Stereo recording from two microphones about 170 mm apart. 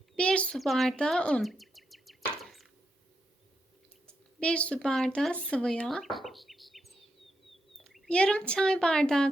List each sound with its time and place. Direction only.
0.2 s chirp: 5° left (ahead or behind)
4.4 s speech: 5° left (ahead or behind)